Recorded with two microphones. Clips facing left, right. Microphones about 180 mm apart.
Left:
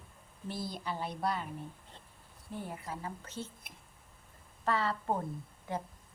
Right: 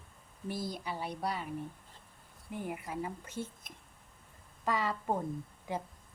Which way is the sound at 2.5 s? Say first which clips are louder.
Right 2 dB; 15° right (ahead or behind).